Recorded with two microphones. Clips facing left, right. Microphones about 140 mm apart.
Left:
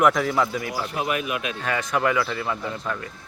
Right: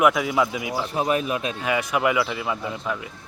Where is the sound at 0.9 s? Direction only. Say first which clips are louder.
Right 4 dB; 35° right (ahead or behind).